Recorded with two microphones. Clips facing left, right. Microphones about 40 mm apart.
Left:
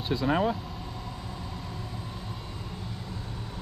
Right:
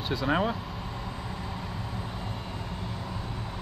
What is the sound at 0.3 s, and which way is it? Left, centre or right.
Speech, right.